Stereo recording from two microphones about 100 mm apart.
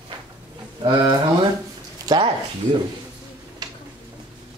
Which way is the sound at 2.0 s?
55° right (ahead or behind).